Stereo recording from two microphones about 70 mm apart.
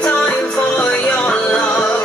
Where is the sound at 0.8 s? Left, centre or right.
Centre.